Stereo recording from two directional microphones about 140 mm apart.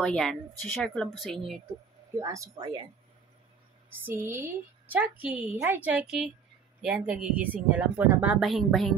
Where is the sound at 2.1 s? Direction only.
20° right (ahead or behind).